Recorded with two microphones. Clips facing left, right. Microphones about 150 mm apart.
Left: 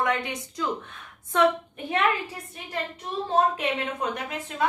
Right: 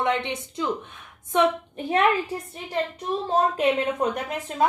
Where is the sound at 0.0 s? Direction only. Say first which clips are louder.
Right 2 dB; 25° right (ahead or behind).